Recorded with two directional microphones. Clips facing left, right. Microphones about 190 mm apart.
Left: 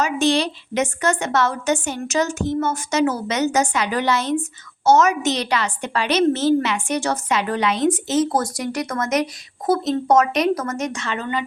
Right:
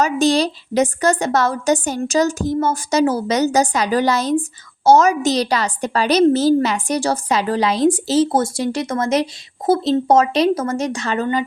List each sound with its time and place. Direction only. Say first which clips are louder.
0.0 s a woman's voice: right 3 dB; 40° right (ahead or behind)